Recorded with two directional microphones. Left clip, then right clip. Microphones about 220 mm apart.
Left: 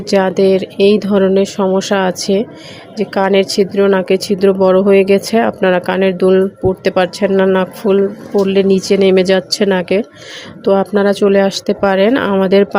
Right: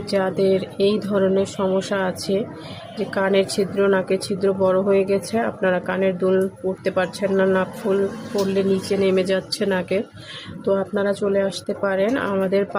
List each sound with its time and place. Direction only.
0.1 s speech: 35° left (ahead or behind)